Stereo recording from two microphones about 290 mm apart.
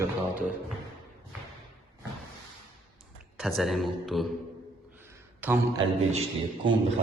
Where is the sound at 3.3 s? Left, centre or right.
Centre.